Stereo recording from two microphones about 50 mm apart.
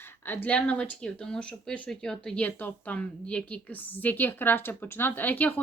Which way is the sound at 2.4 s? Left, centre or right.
Left.